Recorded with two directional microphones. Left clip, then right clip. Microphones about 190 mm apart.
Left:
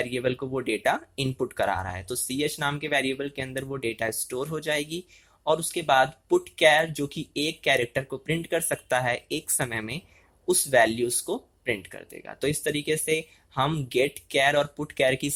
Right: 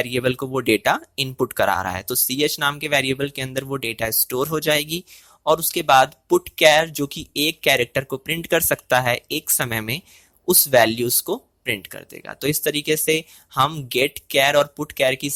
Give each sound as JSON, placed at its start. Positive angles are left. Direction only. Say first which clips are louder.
{"t": 0.0, "sound": "speech", "louder": "right 6 dB", "side_deg": -30}